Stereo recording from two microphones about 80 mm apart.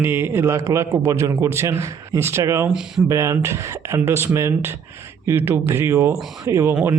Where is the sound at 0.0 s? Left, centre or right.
Right.